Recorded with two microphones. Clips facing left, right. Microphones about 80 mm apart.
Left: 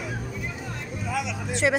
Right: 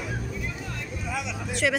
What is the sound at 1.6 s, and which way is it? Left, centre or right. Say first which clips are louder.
Speech: left 2 dB; left.